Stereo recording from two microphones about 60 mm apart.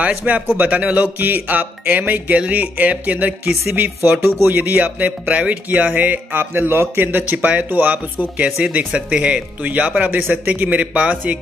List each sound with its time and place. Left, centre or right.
0.3 s speech: right
3.6 s speech: right
8.5 s speech: centre